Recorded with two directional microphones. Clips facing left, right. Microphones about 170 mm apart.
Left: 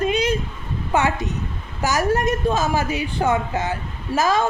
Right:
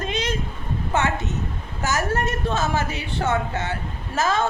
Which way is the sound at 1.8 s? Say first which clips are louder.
Left 4 dB; 15° left (ahead or behind).